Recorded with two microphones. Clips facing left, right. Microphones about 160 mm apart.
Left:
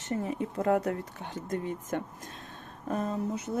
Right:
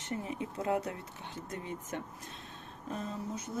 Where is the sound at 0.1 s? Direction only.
45° left (ahead or behind).